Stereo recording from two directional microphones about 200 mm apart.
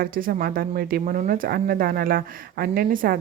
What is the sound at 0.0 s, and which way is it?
A woman's voice, 45° right (ahead or behind).